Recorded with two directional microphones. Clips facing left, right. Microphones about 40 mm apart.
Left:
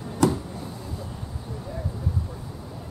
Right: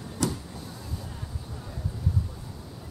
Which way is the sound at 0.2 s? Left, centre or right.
Left.